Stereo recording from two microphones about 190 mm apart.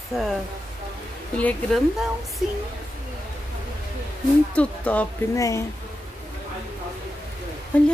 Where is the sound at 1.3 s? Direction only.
10° left (ahead or behind).